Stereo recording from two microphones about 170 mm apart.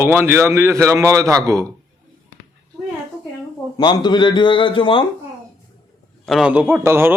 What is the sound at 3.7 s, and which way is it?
A man's voice, 25° left (ahead or behind).